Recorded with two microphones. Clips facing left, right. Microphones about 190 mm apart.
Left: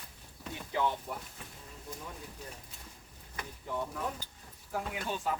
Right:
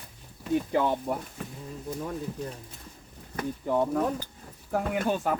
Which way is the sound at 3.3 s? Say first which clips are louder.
Right 11 dB; 60° right (ahead or behind).